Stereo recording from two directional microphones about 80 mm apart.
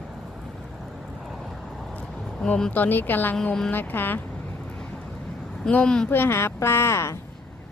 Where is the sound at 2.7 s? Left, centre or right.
Left.